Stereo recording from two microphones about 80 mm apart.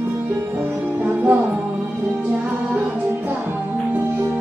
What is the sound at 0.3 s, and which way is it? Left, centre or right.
Music, right.